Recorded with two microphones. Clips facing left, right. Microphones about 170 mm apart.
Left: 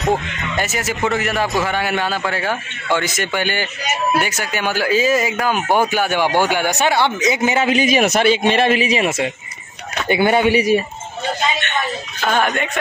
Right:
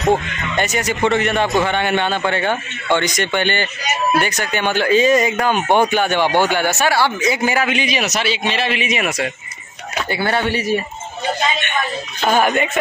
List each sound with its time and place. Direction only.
0.0 s speech: centre (ahead or behind); by 7.7 s 20° left (ahead or behind)
7.7 s a man's voice: 45° left (ahead or behind)
8.8 s speech: 30° left (ahead or behind); by 10.8 s 15° left (ahead or behind)
12.2 s speech: 10° right (ahead or behind)